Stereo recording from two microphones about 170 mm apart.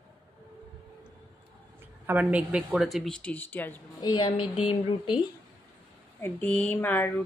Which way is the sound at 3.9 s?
30° left (ahead or behind).